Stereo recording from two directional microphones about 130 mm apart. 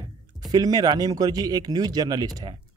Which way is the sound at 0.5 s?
30° right (ahead or behind).